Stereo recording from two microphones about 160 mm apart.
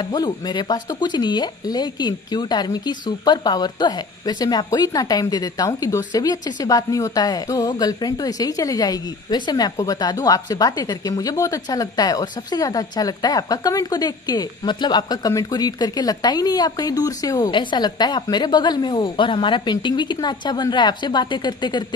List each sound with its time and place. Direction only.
0.0 s speech: 25° left (ahead or behind)